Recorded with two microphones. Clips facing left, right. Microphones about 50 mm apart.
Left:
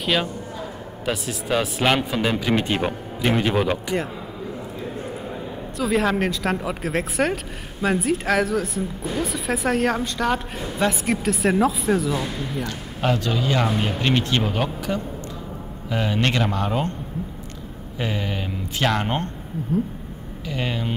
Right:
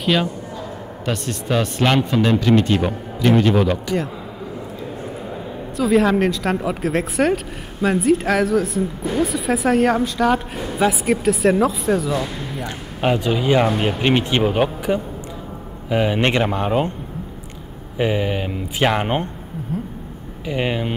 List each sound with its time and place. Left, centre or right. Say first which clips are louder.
0.0 s a man's voice: right 3 dB; centre
2.5 s a man's voice: right 5 dB; centre
5.8 s speech: right 5 dB; centre
12.6 s speech: right 5 dB; centre
17.9 s speech: right 7 dB; centre
20.4 s speech: right 5 dB; right